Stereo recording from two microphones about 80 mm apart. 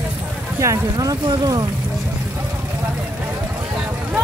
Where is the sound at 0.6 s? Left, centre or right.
Right.